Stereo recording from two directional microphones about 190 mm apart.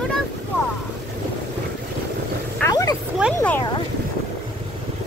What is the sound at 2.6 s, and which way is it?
Vehicle, 15° left (ahead or behind).